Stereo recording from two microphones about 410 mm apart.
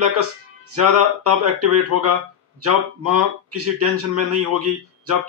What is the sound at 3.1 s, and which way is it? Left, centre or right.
Music, right.